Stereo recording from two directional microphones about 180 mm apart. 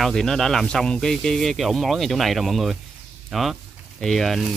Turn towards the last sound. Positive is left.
turn(degrees=0)  # may be behind; listen again after turning